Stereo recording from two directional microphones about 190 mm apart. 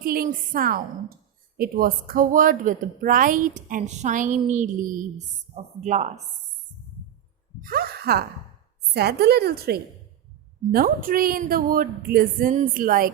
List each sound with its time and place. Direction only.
0.0 s a woman's voice: 50° right (ahead or behind)
7.6 s a woman's voice: 50° right (ahead or behind)